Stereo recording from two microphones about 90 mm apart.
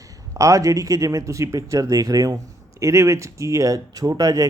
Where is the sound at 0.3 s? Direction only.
35° right (ahead or behind).